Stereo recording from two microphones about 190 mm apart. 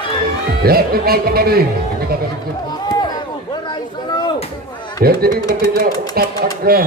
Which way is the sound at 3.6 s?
20° left (ahead or behind).